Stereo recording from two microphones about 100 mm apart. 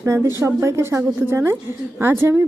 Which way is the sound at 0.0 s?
30° right (ahead or behind).